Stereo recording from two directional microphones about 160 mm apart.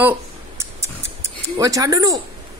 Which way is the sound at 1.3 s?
25° right (ahead or behind).